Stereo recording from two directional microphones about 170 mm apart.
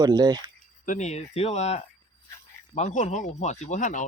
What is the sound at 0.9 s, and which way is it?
Speech, 45° left (ahead or behind).